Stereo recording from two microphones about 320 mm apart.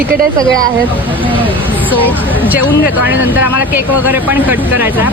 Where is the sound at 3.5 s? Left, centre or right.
Left.